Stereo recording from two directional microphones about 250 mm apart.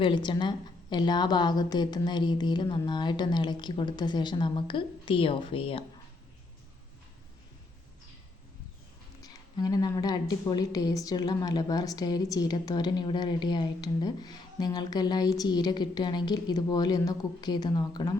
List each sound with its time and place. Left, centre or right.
0.0 s a woman's voice: centre
9.2 s a woman's voice: centre